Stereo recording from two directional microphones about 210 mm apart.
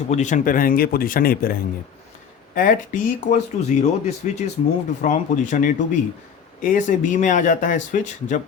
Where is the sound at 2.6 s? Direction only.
40° left (ahead or behind).